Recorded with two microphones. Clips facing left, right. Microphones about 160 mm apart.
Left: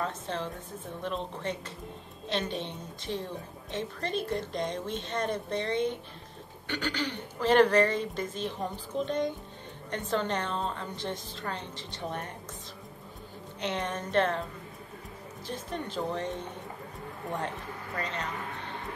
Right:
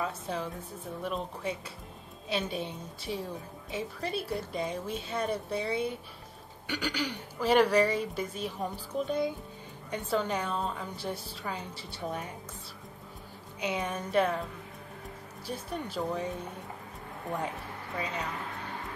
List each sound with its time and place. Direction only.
0.0 s a woman's voice: 5° right (ahead or behind)
13.6 s a woman's voice: 10° right (ahead or behind)
15.4 s a woman's voice: 10° right (ahead or behind)
17.9 s a woman's voice: 10° right (ahead or behind)